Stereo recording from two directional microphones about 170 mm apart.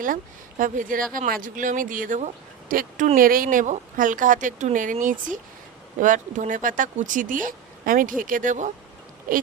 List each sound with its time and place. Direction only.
0.6 s speech: 50° right (ahead or behind)